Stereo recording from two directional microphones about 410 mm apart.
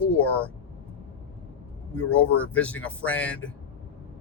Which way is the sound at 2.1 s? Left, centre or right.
Centre.